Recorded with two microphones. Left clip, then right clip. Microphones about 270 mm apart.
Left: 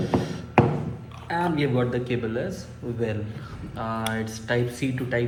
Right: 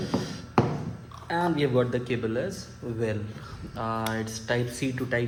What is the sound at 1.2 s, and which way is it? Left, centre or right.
Speech, right.